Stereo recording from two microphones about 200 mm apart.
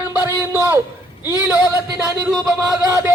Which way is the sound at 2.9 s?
15° right (ahead or behind).